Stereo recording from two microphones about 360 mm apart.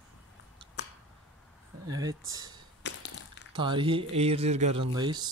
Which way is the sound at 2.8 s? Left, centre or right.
Left.